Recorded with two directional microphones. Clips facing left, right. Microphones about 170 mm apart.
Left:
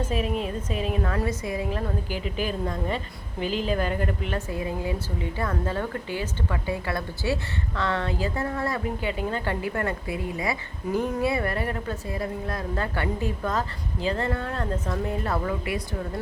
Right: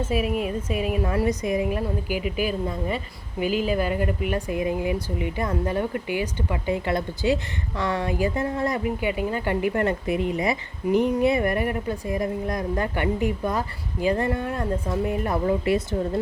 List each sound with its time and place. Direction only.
0.1 s a woman's voice: 10° right (ahead or behind)
15.4 s speech: 30° right (ahead or behind)